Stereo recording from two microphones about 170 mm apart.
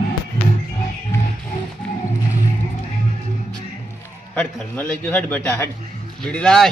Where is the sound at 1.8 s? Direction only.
5° left (ahead or behind).